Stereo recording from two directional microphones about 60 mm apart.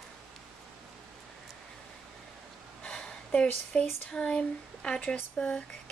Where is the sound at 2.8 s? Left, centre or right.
Centre.